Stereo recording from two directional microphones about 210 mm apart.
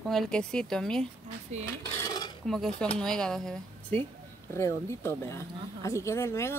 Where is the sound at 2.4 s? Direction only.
Centre (ahead or behind).